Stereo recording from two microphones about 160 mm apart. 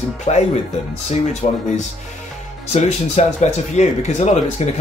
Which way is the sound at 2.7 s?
45° left (ahead or behind).